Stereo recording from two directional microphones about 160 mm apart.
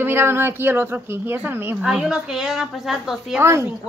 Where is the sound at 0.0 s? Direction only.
15° right (ahead or behind).